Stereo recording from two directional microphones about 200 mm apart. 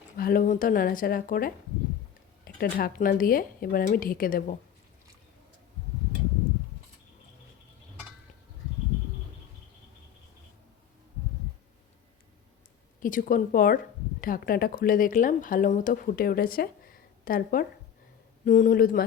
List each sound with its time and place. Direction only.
0.2 s speech: 45° left (ahead or behind)
13.0 s speech: 40° left (ahead or behind)